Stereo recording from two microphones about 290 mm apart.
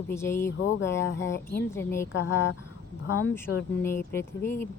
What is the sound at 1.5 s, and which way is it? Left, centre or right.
Speech, centre.